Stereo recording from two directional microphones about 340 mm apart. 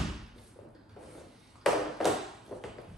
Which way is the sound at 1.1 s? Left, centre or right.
Centre.